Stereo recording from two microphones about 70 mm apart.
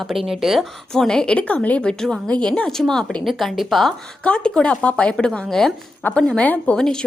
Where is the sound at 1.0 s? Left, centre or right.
Centre.